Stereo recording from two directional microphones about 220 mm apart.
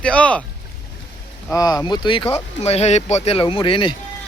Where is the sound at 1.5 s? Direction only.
15° left (ahead or behind).